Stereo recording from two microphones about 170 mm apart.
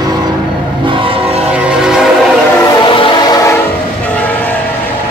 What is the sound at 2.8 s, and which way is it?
Train, 30° left (ahead or behind).